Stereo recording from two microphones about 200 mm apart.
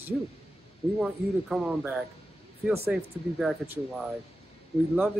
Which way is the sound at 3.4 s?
Centre (ahead or behind).